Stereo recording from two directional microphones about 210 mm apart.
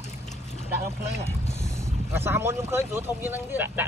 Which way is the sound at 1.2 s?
10° right (ahead or behind).